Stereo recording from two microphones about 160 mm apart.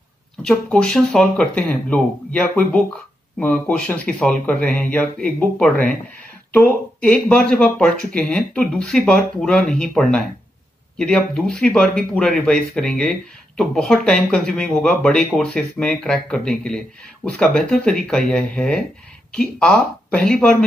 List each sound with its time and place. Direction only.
0.4 s speech: 5° left (ahead or behind)